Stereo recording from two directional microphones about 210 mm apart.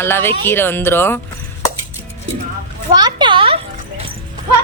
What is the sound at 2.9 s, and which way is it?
Speech, 20° right (ahead or behind).